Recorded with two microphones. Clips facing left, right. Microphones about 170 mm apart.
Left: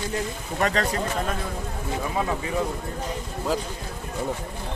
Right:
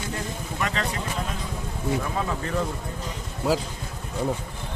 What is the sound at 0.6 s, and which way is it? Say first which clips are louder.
Speech: left 5 dB; 40° left (ahead or behind).